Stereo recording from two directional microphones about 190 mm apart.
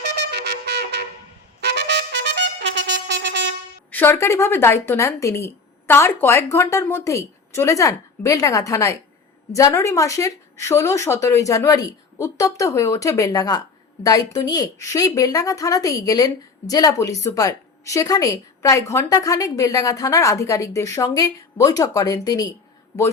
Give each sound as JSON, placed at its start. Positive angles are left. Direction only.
{"t": 0.0, "sound": "wind instrument", "side_deg": -60}
{"t": 1.6, "sound": "trumpet", "side_deg": -65}
{"t": 3.9, "sound": "speech", "side_deg": 10}